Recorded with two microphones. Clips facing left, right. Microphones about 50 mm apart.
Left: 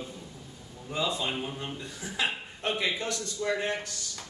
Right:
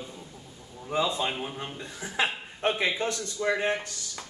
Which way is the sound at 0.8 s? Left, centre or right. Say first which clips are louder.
Right 3 dB; right.